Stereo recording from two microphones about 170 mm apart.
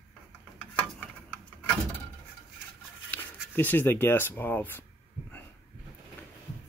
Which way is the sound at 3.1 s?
10° left (ahead or behind).